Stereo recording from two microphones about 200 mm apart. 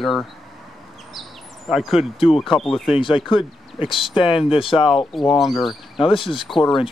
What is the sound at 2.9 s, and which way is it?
Speech, 25° left (ahead or behind).